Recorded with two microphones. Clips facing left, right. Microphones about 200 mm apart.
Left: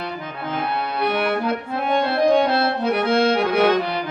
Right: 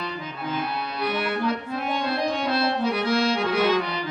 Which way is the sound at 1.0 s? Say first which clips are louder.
Left 3 dB; 60° left (ahead or behind).